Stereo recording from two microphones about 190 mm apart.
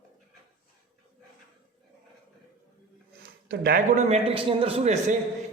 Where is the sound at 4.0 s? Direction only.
35° right (ahead or behind).